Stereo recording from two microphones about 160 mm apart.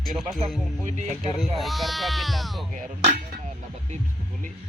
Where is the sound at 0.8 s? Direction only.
50° right (ahead or behind).